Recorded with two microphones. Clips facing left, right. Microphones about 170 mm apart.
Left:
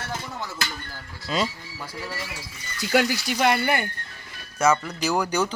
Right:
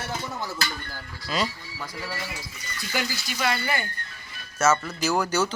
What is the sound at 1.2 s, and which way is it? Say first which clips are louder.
Speech: left 2 dB; 25° left (ahead or behind).